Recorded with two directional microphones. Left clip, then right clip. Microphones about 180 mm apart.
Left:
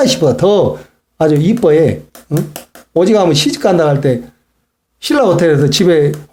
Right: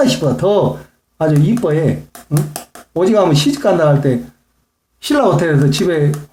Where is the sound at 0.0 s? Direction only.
35° left (ahead or behind).